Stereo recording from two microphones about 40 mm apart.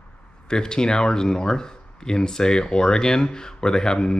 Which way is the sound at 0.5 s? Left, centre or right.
Centre.